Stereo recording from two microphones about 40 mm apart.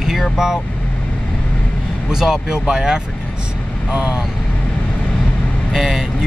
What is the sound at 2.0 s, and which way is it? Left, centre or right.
Speech, centre.